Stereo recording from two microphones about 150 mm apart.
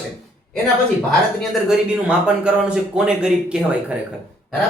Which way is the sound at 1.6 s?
5° right (ahead or behind).